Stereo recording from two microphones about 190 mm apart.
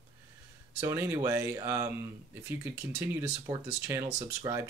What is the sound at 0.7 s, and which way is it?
Speech, 15° right (ahead or behind).